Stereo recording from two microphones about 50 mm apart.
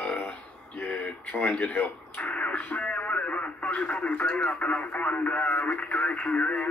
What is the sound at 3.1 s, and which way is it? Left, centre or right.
Radio, left.